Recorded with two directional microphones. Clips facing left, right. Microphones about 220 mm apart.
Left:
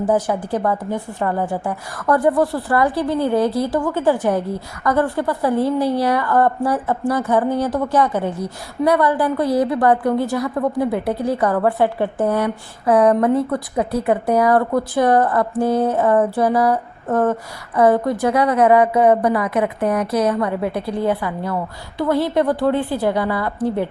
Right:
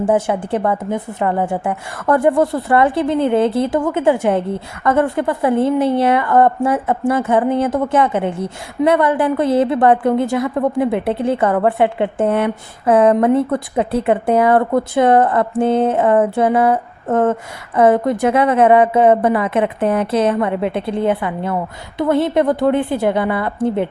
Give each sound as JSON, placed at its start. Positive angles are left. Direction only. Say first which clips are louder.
{"t": 0.0, "sound": "a woman's voice", "louder": "right 2 dB", "side_deg": -25}